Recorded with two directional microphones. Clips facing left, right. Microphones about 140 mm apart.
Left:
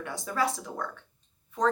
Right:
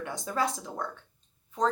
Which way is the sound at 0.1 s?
25° right (ahead or behind).